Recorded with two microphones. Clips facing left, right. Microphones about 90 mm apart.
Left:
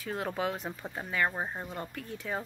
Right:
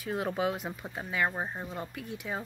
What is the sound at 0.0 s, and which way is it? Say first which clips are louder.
Speech: right 2 dB; 20° right (ahead or behind).